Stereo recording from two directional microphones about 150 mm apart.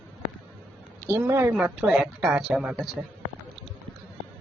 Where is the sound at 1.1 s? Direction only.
15° right (ahead or behind).